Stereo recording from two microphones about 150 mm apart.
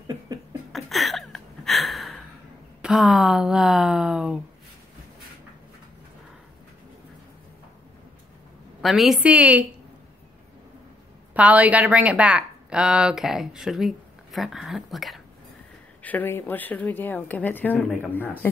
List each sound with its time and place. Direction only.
0.0 s laughter: 25° right (ahead or behind)
0.7 s a sound: centre (ahead or behind)
2.8 s a woman's voice: 5° right (ahead or behind)
8.8 s a woman's voice: centre (ahead or behind)
11.3 s a woman's voice: 10° right (ahead or behind)
16.0 s speech: 10° left (ahead or behind)